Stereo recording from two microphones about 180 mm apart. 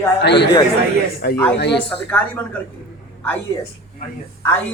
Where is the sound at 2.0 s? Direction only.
10° left (ahead or behind).